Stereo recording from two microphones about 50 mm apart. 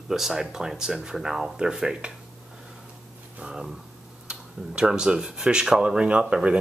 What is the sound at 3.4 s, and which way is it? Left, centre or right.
Speech, centre.